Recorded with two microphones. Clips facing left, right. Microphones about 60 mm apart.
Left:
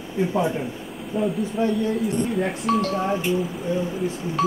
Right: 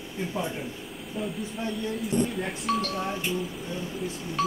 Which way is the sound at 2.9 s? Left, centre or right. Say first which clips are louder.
Left 7 dB; left.